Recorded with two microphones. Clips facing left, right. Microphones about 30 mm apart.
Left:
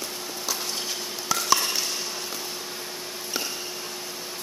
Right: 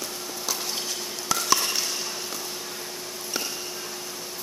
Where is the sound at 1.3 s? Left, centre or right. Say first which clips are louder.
Left 1 dB; centre.